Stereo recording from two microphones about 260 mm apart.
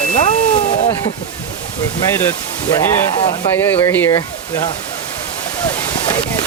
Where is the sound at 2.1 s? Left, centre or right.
Centre.